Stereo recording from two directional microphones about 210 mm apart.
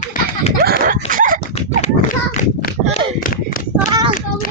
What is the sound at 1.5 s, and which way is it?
Horse, 30° left (ahead or behind).